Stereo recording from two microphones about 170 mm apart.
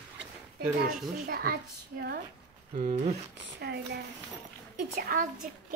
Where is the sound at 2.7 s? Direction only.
40° right (ahead or behind).